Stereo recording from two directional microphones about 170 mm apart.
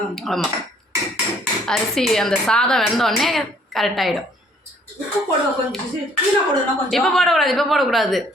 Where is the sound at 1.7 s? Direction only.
Centre (ahead or behind).